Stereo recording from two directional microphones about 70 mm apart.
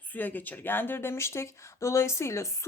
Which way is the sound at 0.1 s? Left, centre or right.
Left.